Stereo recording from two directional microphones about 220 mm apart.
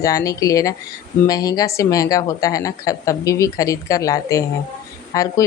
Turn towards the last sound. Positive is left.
turn(degrees=15)  # may be behind; listen again after turning